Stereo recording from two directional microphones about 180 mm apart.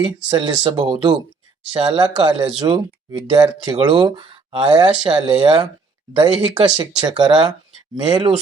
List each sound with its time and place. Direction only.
0.3 s speech: 25° right (ahead or behind)